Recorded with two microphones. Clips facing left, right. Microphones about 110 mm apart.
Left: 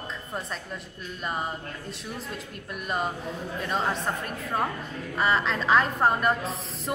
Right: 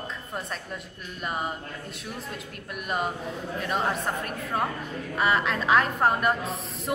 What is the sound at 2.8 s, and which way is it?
Speech, 5° right (ahead or behind).